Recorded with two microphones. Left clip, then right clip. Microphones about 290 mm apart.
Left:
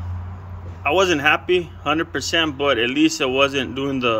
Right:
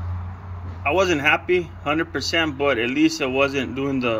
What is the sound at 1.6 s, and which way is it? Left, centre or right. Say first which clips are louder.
Speech: left 2 dB; left.